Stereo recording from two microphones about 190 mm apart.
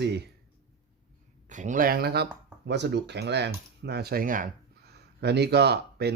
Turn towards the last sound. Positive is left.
turn(degrees=-60)  # may be behind; listen again after turning